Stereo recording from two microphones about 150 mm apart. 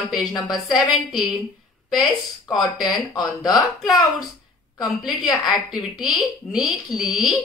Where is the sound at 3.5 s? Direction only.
Centre (ahead or behind).